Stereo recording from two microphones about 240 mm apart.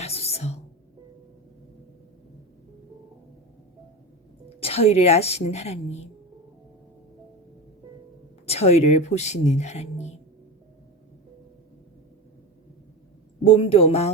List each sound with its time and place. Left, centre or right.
0.0 s whispering: left
4.4 s a woman's voice: left
8.4 s speech: left
13.4 s speech: left